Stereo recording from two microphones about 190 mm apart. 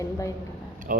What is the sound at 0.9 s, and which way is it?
Speech, 45° right (ahead or behind).